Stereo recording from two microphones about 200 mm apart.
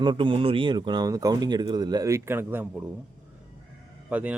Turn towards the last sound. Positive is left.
turn(degrees=-5)  # may be behind; listen again after turning